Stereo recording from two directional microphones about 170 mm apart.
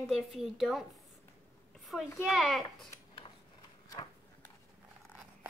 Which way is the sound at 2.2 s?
Centre (ahead or behind).